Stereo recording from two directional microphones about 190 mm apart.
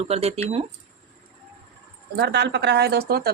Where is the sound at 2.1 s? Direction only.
60° right (ahead or behind).